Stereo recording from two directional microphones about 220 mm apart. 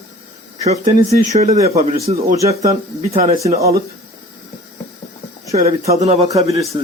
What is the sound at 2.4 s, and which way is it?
Speech, 15° right (ahead or behind).